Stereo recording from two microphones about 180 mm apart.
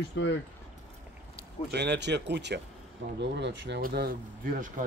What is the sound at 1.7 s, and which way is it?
Speech, 70° right (ahead or behind).